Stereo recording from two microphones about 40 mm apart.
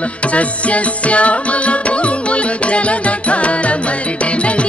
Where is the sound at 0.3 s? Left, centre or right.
Left.